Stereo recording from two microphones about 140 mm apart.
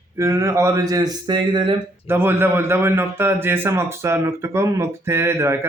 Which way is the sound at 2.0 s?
15° right (ahead or behind).